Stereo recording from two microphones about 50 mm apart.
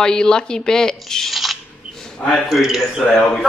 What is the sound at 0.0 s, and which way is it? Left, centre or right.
Speech, centre.